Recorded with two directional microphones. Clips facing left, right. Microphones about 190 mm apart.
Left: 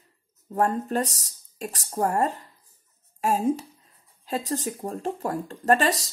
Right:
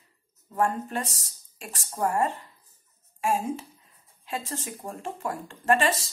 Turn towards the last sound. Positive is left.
turn(degrees=40)  # may be behind; listen again after turning